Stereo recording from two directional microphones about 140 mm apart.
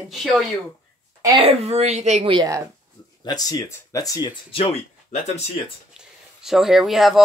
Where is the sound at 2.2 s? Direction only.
35° right (ahead or behind).